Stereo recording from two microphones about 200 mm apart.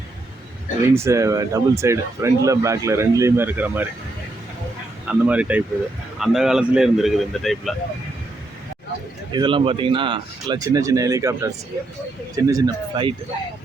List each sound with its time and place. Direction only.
0.9 s speech: 15° right (ahead or behind)
5.0 s speech: 5° right (ahead or behind)
9.3 s speech: 25° right (ahead or behind)